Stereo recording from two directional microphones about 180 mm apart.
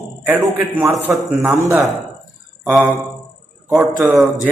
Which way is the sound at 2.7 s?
Centre (ahead or behind).